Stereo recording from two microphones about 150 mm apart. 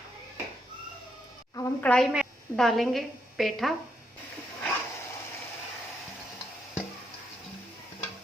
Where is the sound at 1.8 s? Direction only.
5° left (ahead or behind).